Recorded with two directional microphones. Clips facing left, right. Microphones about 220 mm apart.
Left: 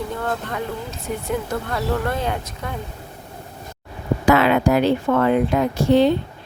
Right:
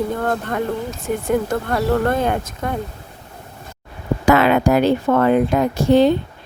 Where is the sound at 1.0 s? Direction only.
50° right (ahead or behind).